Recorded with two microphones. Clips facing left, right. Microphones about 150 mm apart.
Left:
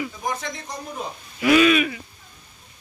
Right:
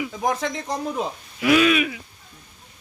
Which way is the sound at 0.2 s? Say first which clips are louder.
Right 5 dB; 90° right.